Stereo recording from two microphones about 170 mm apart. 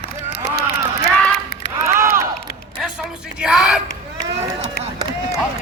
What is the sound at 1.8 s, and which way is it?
Crowd, 15° right (ahead or behind).